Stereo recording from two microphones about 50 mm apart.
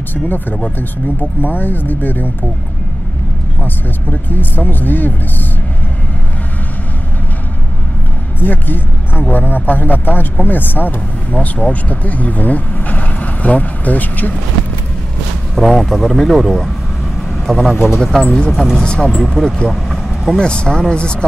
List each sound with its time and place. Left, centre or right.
0.1 s speech: left
3.6 s speech: left
8.4 s speech: left
11.3 s speech: left
15.5 s speech: centre
18.8 s speech: centre
19.7 s vehicle: centre
20.3 s speech: centre